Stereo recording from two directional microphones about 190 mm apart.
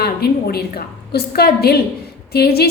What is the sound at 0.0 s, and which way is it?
A woman's voice, 55° left (ahead or behind).